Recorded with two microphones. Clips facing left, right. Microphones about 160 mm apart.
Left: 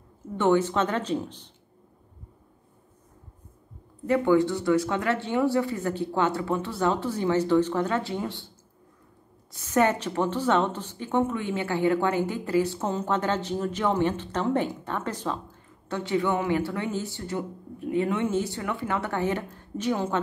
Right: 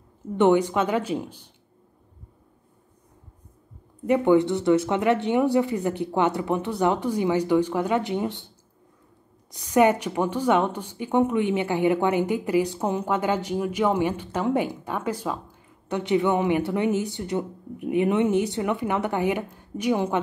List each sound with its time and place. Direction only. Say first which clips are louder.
0.4 s a woman's voice: right 3 dB; 15° right (ahead or behind)
4.0 s a woman's voice: right 2 dB; 20° right (ahead or behind)
9.5 s a woman's voice: right 4 dB; 15° right (ahead or behind)